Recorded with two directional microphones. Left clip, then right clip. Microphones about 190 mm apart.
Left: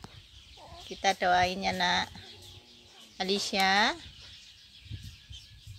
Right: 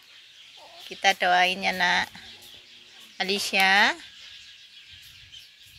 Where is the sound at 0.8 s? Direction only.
5° left (ahead or behind).